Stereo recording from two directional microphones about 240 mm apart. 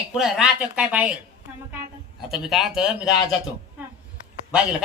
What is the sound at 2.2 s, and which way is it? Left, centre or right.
A woman's voice, centre.